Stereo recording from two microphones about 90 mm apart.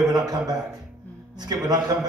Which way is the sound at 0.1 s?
50° right (ahead or behind).